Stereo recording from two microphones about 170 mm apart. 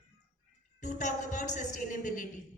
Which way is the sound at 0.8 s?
45° left (ahead or behind).